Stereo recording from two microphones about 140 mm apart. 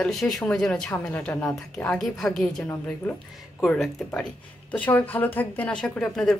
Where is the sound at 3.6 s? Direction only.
5° left (ahead or behind).